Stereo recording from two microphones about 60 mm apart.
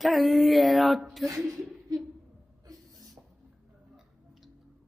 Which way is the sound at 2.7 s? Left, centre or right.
Right.